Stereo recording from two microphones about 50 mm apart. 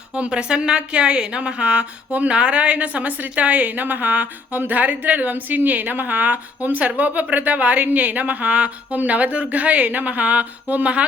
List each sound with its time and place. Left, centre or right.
0.2 s a woman's voice: centre